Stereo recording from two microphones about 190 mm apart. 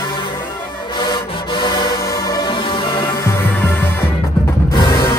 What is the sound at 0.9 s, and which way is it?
Music, 25° left (ahead or behind).